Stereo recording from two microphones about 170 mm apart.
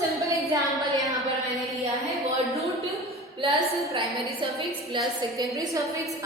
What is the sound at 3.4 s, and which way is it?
A woman's voice, 30° right (ahead or behind).